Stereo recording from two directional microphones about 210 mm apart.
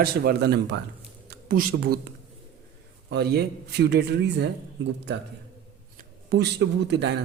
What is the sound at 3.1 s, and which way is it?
A man's voice, 50° right (ahead or behind).